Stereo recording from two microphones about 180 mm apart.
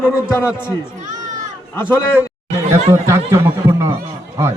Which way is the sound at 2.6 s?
15° right (ahead or behind).